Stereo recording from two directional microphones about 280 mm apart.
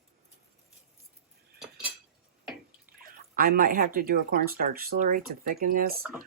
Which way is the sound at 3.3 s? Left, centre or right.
Right.